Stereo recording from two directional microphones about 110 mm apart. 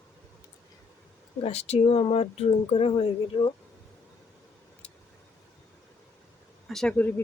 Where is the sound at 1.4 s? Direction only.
70° left (ahead or behind).